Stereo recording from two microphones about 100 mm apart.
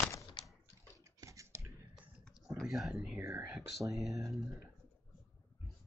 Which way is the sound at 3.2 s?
25° right (ahead or behind).